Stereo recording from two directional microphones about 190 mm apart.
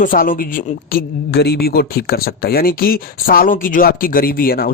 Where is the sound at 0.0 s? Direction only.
45° left (ahead or behind).